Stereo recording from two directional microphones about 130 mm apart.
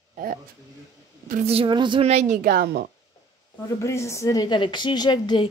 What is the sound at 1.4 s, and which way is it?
Speech, 40° right (ahead or behind).